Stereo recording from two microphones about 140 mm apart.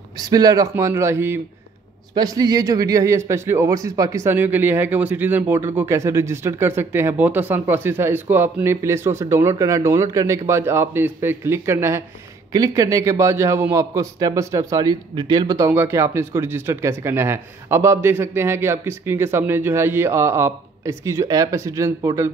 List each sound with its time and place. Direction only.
0.2 s a man's voice: 25° right (ahead or behind)